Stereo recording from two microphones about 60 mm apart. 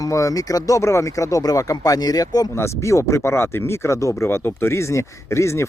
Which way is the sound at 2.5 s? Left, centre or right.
Left.